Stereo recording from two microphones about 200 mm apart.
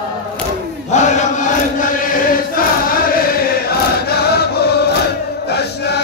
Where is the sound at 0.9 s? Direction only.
40° left (ahead or behind).